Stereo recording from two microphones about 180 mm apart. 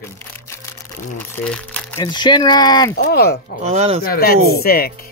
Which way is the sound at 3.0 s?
60° left (ahead or behind).